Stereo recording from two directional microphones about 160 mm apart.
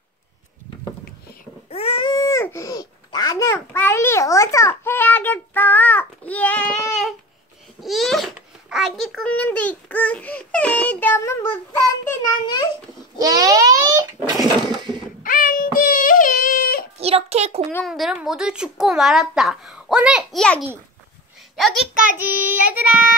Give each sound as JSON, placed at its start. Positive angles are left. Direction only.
{"t": 1.7, "sound": "babbling", "side_deg": 40}
{"t": 8.4, "sound": "a child's voice", "side_deg": -5}
{"t": 13.2, "sound": "a sound", "side_deg": -25}
{"t": 15.2, "sound": "wail", "side_deg": 60}
{"t": 17.0, "sound": "a child's voice", "side_deg": -40}
{"t": 17.8, "sound": "speech", "side_deg": 0}
{"t": 21.5, "sound": "a child's voice", "side_deg": 0}
{"t": 22.1, "sound": "child singing", "side_deg": -10}